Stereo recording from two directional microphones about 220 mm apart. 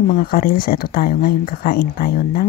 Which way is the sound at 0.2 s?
45° left (ahead or behind).